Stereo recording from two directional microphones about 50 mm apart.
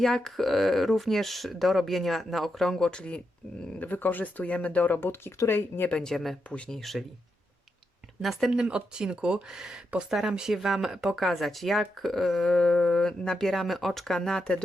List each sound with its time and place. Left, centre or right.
0.0 s speech: centre
3.8 s speech: left
4.9 s speech: left
5.9 s speech: centre
6.5 s speech: left
6.7 s speech: centre
8.2 s speech: centre
8.5 s speech: centre